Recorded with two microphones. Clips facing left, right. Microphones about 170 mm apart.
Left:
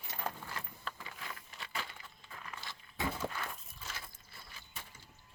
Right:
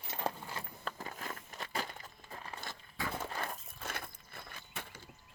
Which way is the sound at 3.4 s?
55° right (ahead or behind).